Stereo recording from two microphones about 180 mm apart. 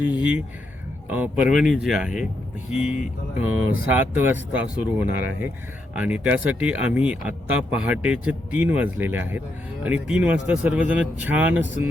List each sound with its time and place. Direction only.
0.0 s speech: 10° right (ahead or behind)
2.9 s music: 40° left (ahead or behind)
3.9 s speech: 10° right (ahead or behind)